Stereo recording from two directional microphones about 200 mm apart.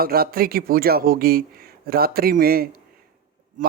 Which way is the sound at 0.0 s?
50° right (ahead or behind).